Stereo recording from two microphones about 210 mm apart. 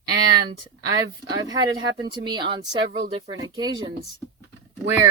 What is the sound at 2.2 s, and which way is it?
Speech, 20° right (ahead or behind).